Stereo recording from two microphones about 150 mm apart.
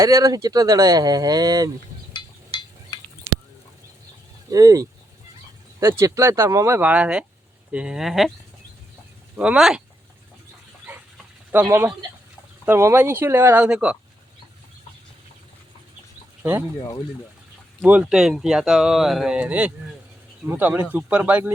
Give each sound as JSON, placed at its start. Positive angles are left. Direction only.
{"t": 0.0, "sound": "speech", "side_deg": -20}
{"t": 2.1, "sound": "a sound", "side_deg": 30}
{"t": 4.5, "sound": "speech", "side_deg": -25}
{"t": 6.0, "sound": "speech", "side_deg": -20}
{"t": 9.3, "sound": "speech", "side_deg": -10}
{"t": 11.5, "sound": "speech", "side_deg": -15}
{"t": 16.4, "sound": "speech", "side_deg": -15}
{"t": 17.8, "sound": "speech", "side_deg": -10}